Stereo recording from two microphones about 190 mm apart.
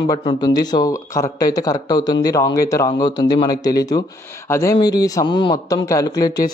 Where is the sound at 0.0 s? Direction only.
25° left (ahead or behind).